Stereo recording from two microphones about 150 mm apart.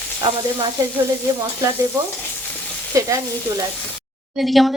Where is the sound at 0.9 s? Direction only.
20° right (ahead or behind).